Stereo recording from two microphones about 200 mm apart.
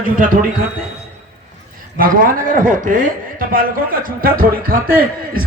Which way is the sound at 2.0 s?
45° right (ahead or behind).